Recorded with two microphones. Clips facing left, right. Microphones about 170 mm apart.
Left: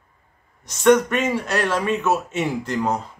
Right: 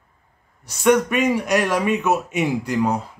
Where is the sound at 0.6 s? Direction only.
10° right (ahead or behind).